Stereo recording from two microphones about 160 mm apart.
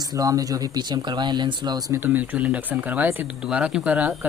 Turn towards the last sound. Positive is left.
turn(degrees=-10)  # may be behind; listen again after turning